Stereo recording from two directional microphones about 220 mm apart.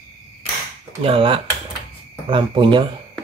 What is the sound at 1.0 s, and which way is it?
Speech, 25° right (ahead or behind).